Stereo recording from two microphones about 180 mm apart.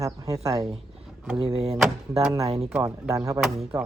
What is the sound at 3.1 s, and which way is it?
Speech, 20° right (ahead or behind).